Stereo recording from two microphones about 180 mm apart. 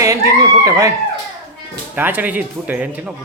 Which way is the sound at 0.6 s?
15° right (ahead or behind).